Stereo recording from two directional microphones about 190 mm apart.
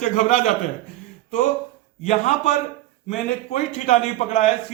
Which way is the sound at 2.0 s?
40° left (ahead or behind).